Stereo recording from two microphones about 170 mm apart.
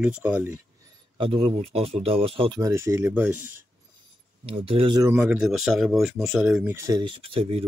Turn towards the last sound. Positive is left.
turn(degrees=-35)  # may be behind; listen again after turning